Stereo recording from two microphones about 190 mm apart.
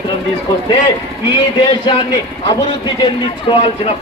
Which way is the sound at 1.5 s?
25° left (ahead or behind).